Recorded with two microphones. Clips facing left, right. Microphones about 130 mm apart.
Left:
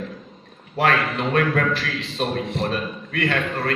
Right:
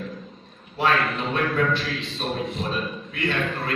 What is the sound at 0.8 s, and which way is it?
A man's voice, 65° left (ahead or behind).